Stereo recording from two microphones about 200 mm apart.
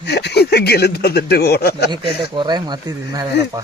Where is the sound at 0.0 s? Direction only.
55° left (ahead or behind).